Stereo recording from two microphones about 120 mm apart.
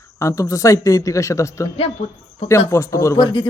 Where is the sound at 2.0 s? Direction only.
65° left (ahead or behind).